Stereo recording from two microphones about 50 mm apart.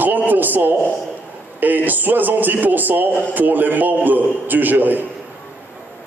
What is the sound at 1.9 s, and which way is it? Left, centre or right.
A man's voice, right.